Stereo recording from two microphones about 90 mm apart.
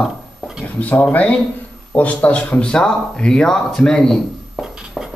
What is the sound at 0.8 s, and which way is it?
Speech, 15° left (ahead or behind).